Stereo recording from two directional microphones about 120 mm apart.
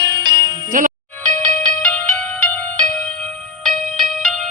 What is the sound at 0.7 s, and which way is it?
Music, 90° right.